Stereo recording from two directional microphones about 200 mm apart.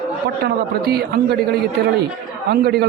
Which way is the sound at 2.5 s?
55° right (ahead or behind).